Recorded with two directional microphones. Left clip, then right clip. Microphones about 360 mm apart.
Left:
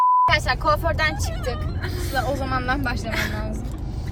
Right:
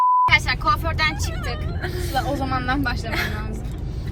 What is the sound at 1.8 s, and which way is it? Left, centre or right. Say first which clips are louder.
A woman's voice: right 1 dB; centre.